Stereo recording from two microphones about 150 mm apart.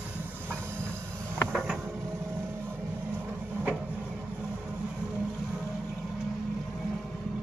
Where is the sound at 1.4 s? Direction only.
5° left (ahead or behind).